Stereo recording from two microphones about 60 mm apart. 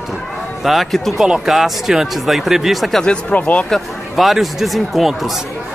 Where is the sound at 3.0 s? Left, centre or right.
Centre.